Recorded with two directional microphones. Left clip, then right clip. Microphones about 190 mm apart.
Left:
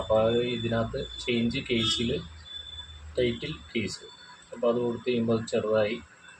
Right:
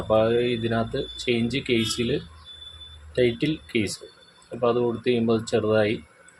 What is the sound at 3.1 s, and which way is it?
Speech, 70° right (ahead or behind).